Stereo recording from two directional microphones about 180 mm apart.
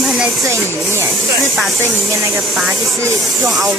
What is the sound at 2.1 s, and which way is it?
Spray, 15° right (ahead or behind).